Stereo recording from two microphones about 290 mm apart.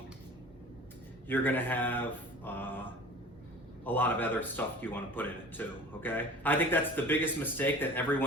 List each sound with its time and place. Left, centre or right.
1.3 s speech: centre